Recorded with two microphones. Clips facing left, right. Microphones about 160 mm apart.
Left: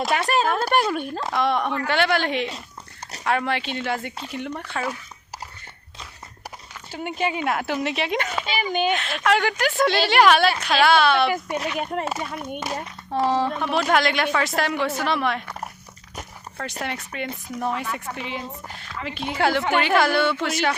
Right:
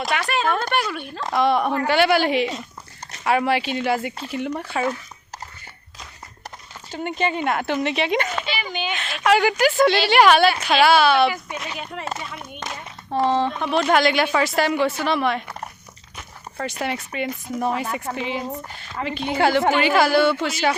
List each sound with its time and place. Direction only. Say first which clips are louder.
0.1 s a sound: left 2 dB; 40° left (ahead or behind)
0.4 s speech: right 1 dB; centre (ahead or behind)
0.7 s speech: left 3 dB; 35° left (ahead or behind)
1.2 s speech: right 5 dB; centre (ahead or behind)
6.9 s speech: right 2 dB; 5° left (ahead or behind)
8.7 s speech: left 9 dB; 50° left (ahead or behind)
9.0 s speech: right 3 dB; centre (ahead or behind)
11.8 s speech: left 4 dB; 45° left (ahead or behind)
13.1 s speech: right 1 dB; 5° left (ahead or behind)
16.6 s speech: right 4 dB; centre (ahead or behind)